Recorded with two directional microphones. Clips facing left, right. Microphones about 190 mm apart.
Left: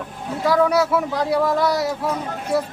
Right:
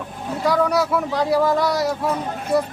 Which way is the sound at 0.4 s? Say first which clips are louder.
Left 2 dB; centre (ahead or behind).